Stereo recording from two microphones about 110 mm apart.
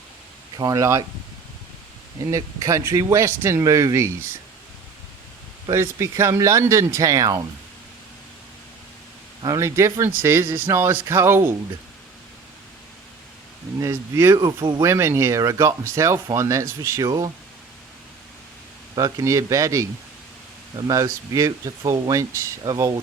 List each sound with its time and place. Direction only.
0.5 s speech: 35° right (ahead or behind)
2.3 s speech: 30° right (ahead or behind)
5.7 s speech: 25° right (ahead or behind)
9.4 s speech: 30° right (ahead or behind)
13.7 s speech: 25° right (ahead or behind)
14.3 s speech: 40° right (ahead or behind)
14.8 s speech: 25° right (ahead or behind)
17.1 s speech: 35° right (ahead or behind)
18.9 s speech: 35° right (ahead or behind)